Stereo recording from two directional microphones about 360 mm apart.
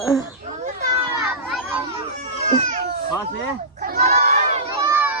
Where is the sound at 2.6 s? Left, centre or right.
Right.